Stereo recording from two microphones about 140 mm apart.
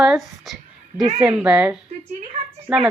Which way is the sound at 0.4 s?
Centre (ahead or behind).